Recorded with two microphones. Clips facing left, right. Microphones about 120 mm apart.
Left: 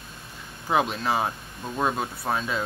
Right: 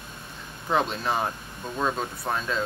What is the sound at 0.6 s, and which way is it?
Speech, 5° left (ahead or behind).